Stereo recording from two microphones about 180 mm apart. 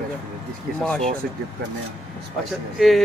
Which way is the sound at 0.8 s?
5° left (ahead or behind).